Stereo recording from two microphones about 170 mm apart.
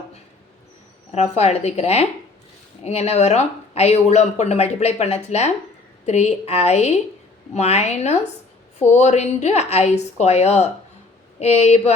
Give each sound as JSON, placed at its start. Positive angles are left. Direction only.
{"t": 1.1, "sound": "speech", "side_deg": 40}